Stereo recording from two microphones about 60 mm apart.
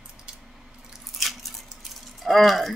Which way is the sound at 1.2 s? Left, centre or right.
Centre.